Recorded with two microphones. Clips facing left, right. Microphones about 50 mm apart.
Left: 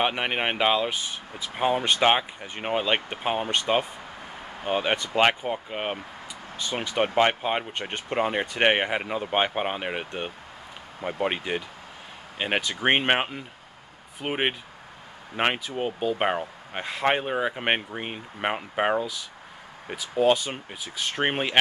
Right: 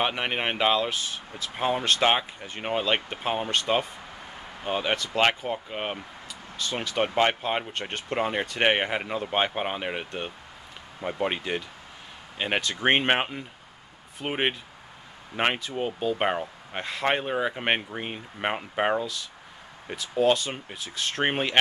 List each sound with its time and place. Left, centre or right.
0.0 s speech: centre